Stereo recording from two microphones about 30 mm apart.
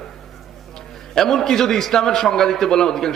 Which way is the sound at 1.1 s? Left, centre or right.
Centre.